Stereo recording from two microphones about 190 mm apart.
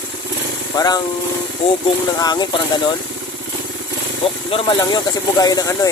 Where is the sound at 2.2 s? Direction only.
20° left (ahead or behind).